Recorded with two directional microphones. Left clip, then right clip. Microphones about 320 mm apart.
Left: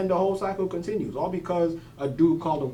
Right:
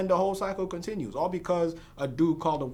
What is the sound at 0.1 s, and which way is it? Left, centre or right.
Speech, right.